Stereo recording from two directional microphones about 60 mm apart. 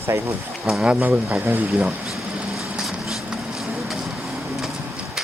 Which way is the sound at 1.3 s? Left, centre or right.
Right.